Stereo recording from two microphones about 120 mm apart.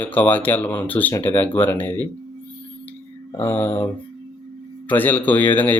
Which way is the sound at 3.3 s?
15° left (ahead or behind).